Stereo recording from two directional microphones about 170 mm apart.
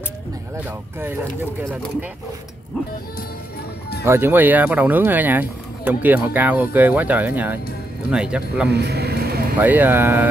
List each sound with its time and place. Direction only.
0.7 s speech: 10° right (ahead or behind)
4.0 s speech: 15° right (ahead or behind)
8.6 s vehicle: 75° right (ahead or behind)
9.6 s speech: 10° right (ahead or behind)